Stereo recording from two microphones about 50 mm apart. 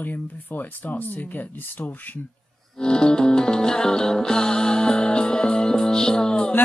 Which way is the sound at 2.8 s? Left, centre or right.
Centre.